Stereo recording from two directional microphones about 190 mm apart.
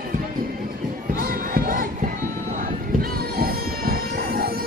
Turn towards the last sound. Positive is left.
turn(degrees=-50)  # may be behind; listen again after turning